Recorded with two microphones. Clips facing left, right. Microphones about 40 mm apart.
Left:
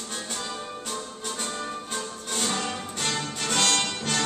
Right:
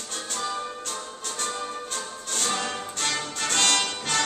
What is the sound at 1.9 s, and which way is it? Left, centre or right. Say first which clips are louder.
Music: left 1 dB; centre.